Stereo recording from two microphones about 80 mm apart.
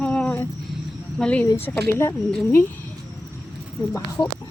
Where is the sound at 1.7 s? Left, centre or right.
Left.